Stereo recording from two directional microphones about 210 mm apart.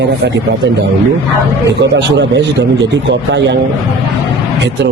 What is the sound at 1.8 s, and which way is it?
A man's voice, 55° right (ahead or behind).